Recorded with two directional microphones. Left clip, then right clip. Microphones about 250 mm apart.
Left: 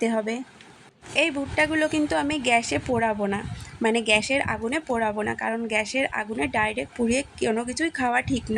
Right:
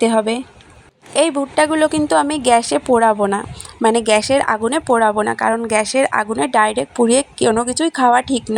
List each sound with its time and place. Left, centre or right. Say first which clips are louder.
0.0 s a woman's voice: right 10 dB; centre
5.5 s speech: right 11 dB; centre
5.7 s a woman's voice: right 8 dB; centre